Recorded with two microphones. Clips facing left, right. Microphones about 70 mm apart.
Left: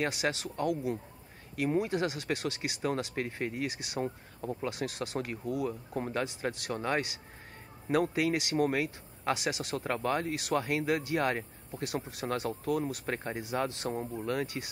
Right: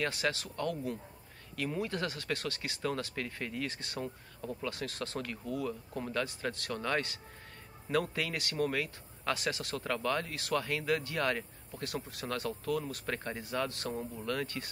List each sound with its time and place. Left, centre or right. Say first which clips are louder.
0.0 s speech: left 2 dB; centre
6.2 s speech: left 3 dB; centre